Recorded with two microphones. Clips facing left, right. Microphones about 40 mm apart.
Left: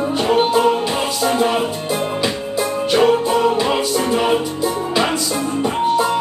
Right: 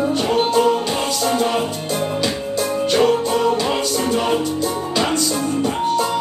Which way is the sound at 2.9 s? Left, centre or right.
Centre.